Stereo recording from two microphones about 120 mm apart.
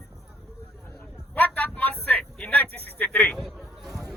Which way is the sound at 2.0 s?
15° left (ahead or behind).